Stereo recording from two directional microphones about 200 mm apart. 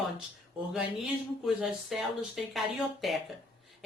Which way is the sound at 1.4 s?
Centre (ahead or behind).